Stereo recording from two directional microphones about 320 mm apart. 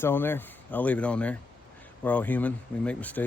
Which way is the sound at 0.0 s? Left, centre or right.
Centre.